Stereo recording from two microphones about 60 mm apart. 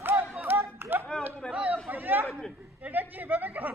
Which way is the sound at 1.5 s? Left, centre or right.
Right.